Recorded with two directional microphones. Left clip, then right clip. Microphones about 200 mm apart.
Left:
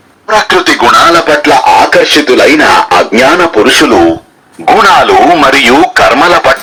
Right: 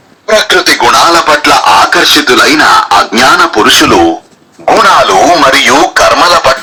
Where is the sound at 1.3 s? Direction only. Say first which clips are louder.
Even; 15° right (ahead or behind).